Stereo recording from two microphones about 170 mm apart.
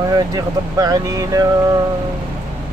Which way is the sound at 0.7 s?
20° right (ahead or behind).